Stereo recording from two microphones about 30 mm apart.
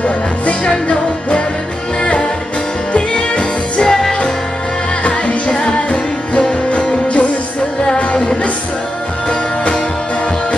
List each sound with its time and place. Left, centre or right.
0.0 s music: left
2.9 s music: left
3.8 s music: centre
5.6 s music: left